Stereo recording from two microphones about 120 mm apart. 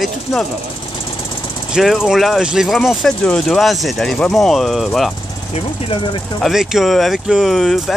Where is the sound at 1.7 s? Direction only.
Centre (ahead or behind).